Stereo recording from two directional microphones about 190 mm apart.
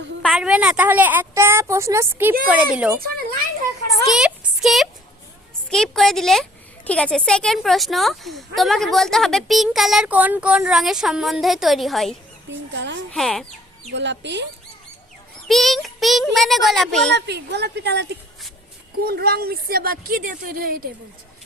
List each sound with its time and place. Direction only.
0.2 s a woman's voice: centre (ahead or behind)
4.0 s a sound: centre (ahead or behind)
5.7 s a woman's voice: 5° left (ahead or behind)
12.7 s speech: 65° right (ahead or behind)
13.1 s a woman's voice: centre (ahead or behind)
13.9 s speech: 65° right (ahead or behind)
15.4 s a woman's voice: centre (ahead or behind)
17.2 s a woman's voice: 65° right (ahead or behind)